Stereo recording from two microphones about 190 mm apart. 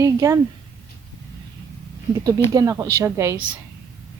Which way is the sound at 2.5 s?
20° right (ahead or behind).